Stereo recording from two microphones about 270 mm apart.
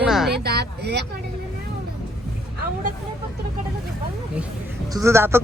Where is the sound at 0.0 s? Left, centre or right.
Centre.